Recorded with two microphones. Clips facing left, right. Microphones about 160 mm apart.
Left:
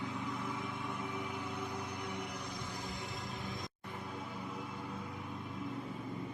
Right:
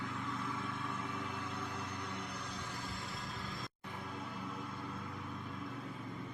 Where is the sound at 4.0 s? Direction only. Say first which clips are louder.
Left 1 dB; 5° left (ahead or behind).